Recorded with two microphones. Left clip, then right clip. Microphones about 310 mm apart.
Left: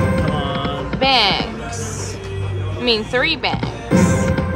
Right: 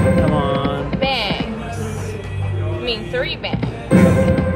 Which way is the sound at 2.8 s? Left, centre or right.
Left.